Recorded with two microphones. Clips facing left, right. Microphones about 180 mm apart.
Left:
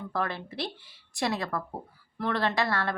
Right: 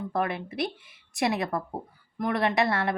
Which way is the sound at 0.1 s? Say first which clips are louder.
Right 2 dB; 20° right (ahead or behind).